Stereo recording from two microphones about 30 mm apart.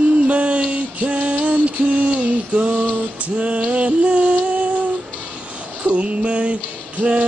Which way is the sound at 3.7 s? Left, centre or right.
Right.